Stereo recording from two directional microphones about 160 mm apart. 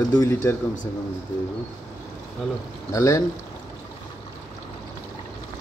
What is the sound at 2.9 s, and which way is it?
Speech, 20° left (ahead or behind).